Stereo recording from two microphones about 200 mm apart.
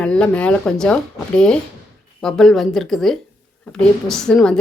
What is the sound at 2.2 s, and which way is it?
Speech, centre (ahead or behind).